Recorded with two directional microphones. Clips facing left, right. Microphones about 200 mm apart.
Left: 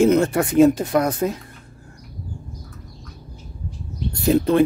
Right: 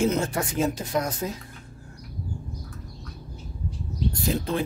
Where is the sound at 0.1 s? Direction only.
60° left (ahead or behind).